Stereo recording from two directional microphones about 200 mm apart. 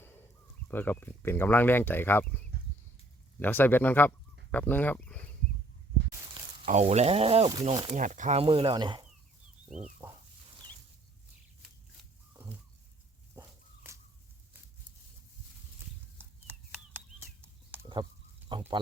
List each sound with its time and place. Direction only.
0.7 s speech: 10° left (ahead or behind)
3.4 s speech: 10° left (ahead or behind)
6.7 s speech: 35° right (ahead or behind)
9.6 s pig: 35° right (ahead or behind)
13.3 s walk: 15° right (ahead or behind)
16.1 s a sound: 10° right (ahead or behind)